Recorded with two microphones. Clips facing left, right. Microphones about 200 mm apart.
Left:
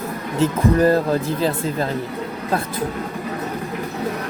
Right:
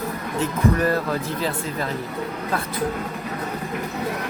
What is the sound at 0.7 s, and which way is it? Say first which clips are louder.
Speech: left 6 dB; 35° left (ahead or behind).